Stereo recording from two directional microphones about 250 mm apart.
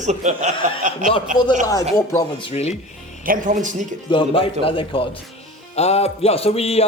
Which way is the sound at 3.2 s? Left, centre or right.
Right.